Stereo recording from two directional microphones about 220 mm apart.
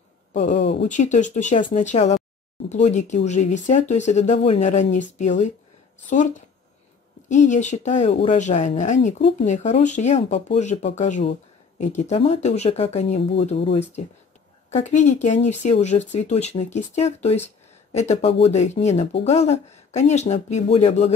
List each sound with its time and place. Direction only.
0.6 s speech: 50° left (ahead or behind)
0.8 s speech: 35° left (ahead or behind)
6.0 s speech: 35° left (ahead or behind)